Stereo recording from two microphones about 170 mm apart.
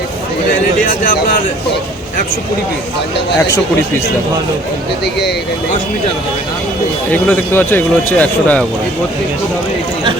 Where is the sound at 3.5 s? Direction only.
15° left (ahead or behind).